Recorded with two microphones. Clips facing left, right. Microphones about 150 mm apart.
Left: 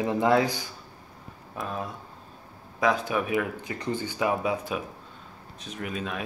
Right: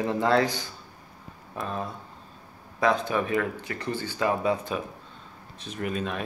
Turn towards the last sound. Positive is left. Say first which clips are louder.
# right 3 dB
turn(degrees=0)  # may be behind; listen again after turning